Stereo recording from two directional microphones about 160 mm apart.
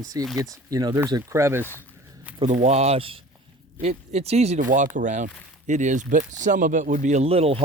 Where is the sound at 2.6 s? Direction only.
45° right (ahead or behind).